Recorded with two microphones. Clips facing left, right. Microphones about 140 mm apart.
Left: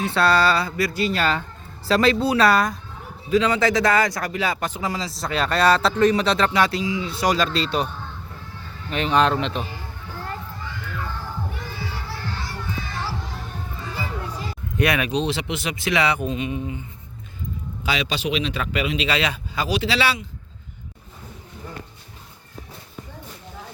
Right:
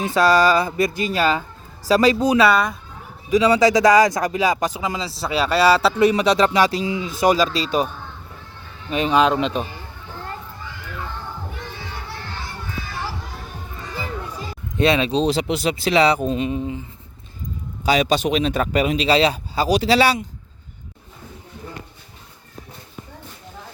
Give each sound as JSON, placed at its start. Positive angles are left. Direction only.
{"t": 0.0, "sound": "speech", "side_deg": -10}
{"t": 2.4, "sound": "speech", "side_deg": 0}
{"t": 3.2, "sound": "speech", "side_deg": -15}
{"t": 5.1, "sound": "speech", "side_deg": -5}
{"t": 8.9, "sound": "speech", "side_deg": -10}
{"t": 14.8, "sound": "speech", "side_deg": -25}
{"t": 17.8, "sound": "speech", "side_deg": -45}